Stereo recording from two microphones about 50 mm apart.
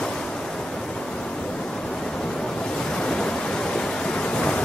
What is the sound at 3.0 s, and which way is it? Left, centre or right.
Pink noise, centre.